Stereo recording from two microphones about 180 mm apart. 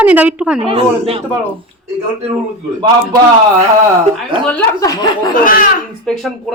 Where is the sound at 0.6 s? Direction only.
30° right (ahead or behind).